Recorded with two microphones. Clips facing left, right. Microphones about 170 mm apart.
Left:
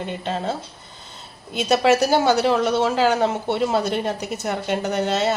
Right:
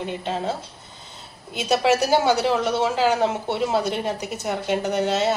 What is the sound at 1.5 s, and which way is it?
A woman's voice, 5° right (ahead or behind).